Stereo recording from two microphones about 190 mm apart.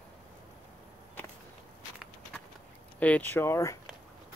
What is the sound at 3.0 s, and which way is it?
Speech, 10° left (ahead or behind).